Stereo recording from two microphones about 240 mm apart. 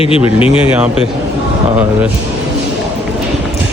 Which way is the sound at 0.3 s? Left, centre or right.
Left.